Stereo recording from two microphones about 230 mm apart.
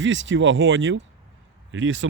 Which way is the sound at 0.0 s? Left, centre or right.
Right.